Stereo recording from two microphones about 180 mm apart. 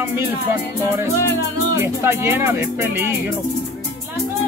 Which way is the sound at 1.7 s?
15° right (ahead or behind).